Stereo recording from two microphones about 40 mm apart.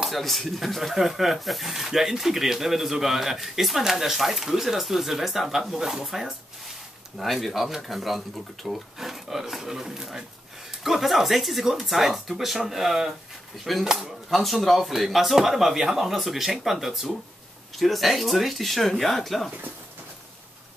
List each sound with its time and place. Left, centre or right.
0.0 s speech: centre
14.3 s speech: centre